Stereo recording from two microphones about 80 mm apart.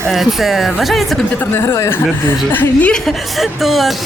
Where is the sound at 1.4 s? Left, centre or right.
Left.